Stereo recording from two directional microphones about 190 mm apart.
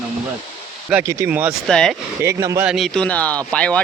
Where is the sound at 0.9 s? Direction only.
15° right (ahead or behind).